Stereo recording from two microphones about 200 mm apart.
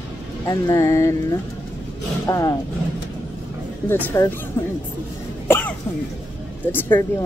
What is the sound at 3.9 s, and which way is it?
Speech, 10° left (ahead or behind).